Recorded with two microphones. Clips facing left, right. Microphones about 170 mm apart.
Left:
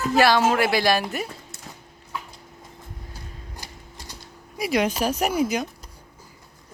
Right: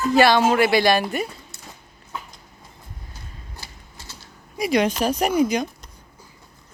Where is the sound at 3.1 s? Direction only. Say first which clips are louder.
Left 2 dB; 15° left (ahead or behind).